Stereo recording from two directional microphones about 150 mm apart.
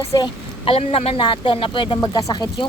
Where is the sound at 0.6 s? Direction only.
40° left (ahead or behind).